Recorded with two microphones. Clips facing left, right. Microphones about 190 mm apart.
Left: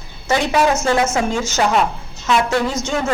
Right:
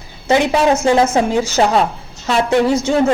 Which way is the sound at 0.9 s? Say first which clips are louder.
Right 4 dB; 35° right (ahead or behind).